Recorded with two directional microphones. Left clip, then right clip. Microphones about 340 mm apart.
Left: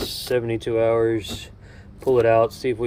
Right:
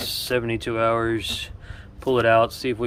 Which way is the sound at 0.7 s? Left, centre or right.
Right.